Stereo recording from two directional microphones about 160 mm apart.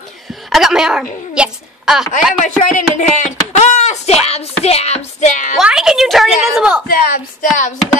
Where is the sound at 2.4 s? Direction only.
50° left (ahead or behind).